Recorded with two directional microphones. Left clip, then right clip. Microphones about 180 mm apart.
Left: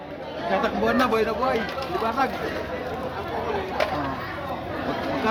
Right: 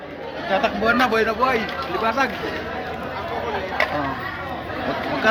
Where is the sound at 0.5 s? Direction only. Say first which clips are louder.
Right 4 dB; centre (ahead or behind).